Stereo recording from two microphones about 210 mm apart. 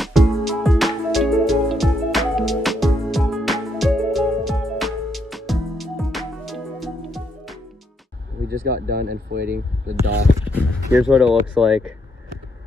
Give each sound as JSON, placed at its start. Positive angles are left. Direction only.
{"t": 0.0, "sound": "music", "side_deg": 0}
{"t": 8.5, "sound": "speech", "side_deg": -50}
{"t": 10.5, "sound": "speech", "side_deg": -5}